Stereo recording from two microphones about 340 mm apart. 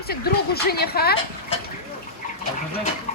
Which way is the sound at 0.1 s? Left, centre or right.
Left.